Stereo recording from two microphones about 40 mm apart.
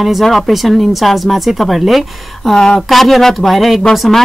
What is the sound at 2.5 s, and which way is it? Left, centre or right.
Speech, centre.